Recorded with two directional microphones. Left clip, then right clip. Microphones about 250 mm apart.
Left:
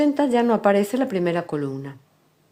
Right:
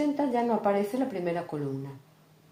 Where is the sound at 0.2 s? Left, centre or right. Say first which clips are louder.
Left 8 dB; left.